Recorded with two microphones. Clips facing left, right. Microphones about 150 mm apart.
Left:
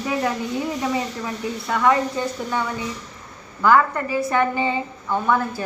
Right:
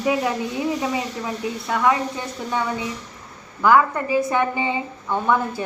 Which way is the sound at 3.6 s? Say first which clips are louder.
Even; 15° right (ahead or behind).